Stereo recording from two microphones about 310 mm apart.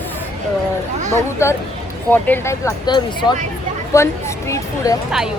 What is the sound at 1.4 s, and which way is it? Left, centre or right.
Speech, centre.